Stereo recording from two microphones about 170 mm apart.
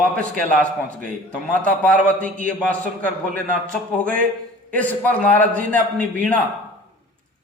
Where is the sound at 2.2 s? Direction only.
50° right (ahead or behind).